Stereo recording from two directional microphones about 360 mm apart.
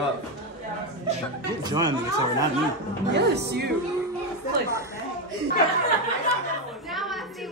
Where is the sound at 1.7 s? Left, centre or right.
Centre.